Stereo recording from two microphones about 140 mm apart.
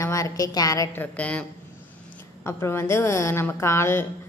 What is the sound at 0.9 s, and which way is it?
A woman's voice, 10° left (ahead or behind).